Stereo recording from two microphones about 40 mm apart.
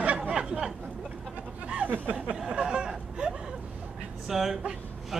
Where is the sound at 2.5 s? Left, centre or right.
Right.